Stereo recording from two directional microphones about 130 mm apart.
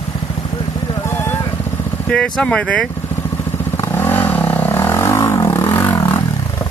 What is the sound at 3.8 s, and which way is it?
Vehicle, 15° left (ahead or behind).